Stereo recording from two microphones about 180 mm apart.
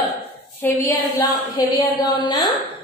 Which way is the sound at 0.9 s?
20° left (ahead or behind).